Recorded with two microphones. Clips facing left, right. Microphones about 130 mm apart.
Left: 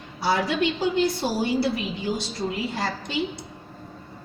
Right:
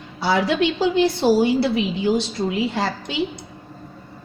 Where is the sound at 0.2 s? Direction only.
90° right.